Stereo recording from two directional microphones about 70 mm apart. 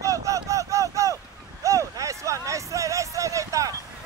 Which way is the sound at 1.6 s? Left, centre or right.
Right.